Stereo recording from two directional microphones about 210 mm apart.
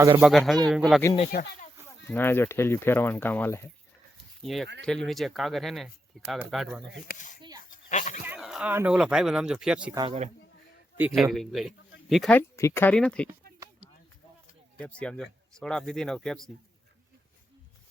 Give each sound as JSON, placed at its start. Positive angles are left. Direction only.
{"t": 0.2, "sound": "speech", "side_deg": 0}
{"t": 1.3, "sound": "speech", "side_deg": 45}
{"t": 2.0, "sound": "speech", "side_deg": 10}
{"t": 4.4, "sound": "speech", "side_deg": 0}
{"t": 7.1, "sound": "speech", "side_deg": 35}
{"t": 7.7, "sound": "goat", "side_deg": 35}
{"t": 8.2, "sound": "speech", "side_deg": -5}
{"t": 9.9, "sound": "speech", "side_deg": -20}
{"t": 10.9, "sound": "speech", "side_deg": -5}
{"t": 12.4, "sound": "speech", "side_deg": 10}
{"t": 14.8, "sound": "speech", "side_deg": 5}